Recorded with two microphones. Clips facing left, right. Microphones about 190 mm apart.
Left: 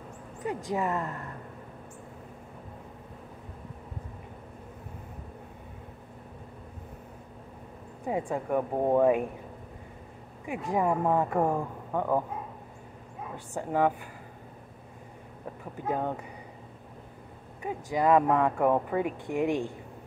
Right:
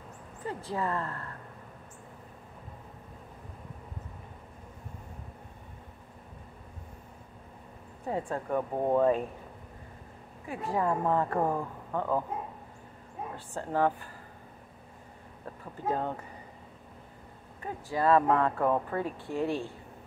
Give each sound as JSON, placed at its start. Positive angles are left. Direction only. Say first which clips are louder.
{"t": 0.7, "sound": "speech", "louder": "left 2 dB", "side_deg": 15}
{"t": 8.1, "sound": "speech", "louder": "left 2 dB", "side_deg": 10}
{"t": 10.4, "sound": "speech", "louder": "left 2 dB", "side_deg": 15}
{"t": 13.6, "sound": "speech", "louder": "left 2 dB", "side_deg": 15}
{"t": 15.9, "sound": "speech", "louder": "left 1 dB", "side_deg": 10}
{"t": 17.6, "sound": "speech", "louder": "left 3 dB", "side_deg": 15}